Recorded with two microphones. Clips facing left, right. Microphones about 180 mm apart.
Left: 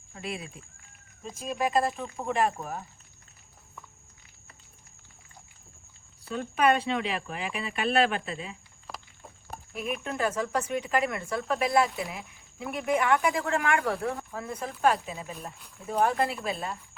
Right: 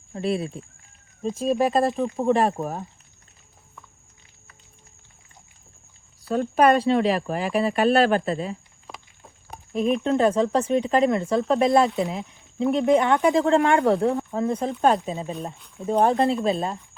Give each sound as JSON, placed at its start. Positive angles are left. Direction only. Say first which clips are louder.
{"t": 0.1, "sound": "speech", "louder": "right 12 dB", "side_deg": -35}
{"t": 6.2, "sound": "speech", "louder": "right 6 dB", "side_deg": -40}
{"t": 9.7, "sound": "speech", "louder": "right 11 dB", "side_deg": -30}